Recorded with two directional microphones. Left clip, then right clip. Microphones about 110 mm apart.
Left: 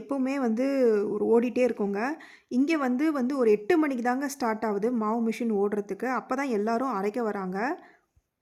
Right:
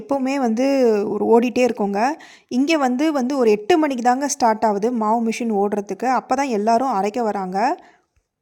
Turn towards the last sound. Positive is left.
turn(degrees=-20)  # may be behind; listen again after turning